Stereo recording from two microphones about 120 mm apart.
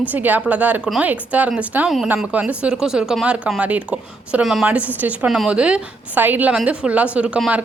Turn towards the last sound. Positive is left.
turn(degrees=-10)  # may be behind; listen again after turning